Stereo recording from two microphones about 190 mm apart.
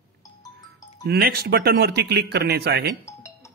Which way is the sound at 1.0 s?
55° right (ahead or behind).